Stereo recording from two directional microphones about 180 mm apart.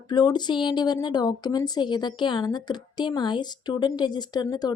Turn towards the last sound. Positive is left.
turn(degrees=20)  # may be behind; listen again after turning